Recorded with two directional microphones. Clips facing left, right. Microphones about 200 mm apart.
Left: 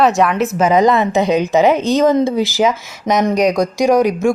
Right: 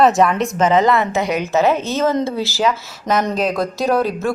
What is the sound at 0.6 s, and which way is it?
A woman's voice, 10° left (ahead or behind).